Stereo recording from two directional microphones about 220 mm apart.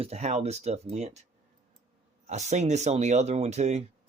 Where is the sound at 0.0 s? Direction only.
30° right (ahead or behind).